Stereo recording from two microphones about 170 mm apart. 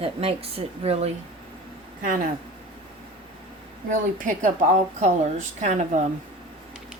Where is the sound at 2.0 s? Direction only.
55° right (ahead or behind).